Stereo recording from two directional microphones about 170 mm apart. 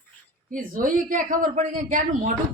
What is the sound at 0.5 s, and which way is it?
Speech, 50° right (ahead or behind).